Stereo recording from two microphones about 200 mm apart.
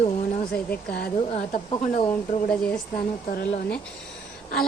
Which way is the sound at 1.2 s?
35° left (ahead or behind).